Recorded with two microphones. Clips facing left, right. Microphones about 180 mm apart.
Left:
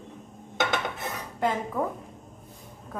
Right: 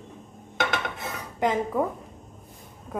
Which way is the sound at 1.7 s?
15° right (ahead or behind).